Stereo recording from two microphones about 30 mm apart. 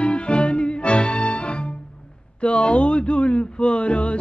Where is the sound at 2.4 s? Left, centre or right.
Left.